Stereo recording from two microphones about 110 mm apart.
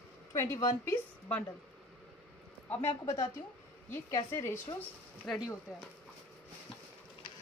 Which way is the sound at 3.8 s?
20° left (ahead or behind).